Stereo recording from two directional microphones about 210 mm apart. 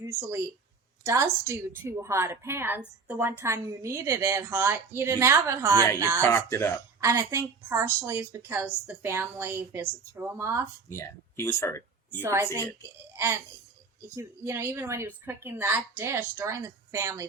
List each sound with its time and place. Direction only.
0.0 s a woman's voice: 10° right (ahead or behind)
6.2 s speech: 10° left (ahead or behind)
7.0 s a woman's voice: 15° right (ahead or behind)
10.8 s speech: 15° left (ahead or behind)
12.2 s a woman's voice: 10° right (ahead or behind)